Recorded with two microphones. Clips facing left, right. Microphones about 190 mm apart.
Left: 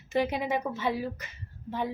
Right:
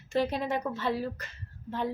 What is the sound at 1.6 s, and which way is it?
Speech, 15° left (ahead or behind).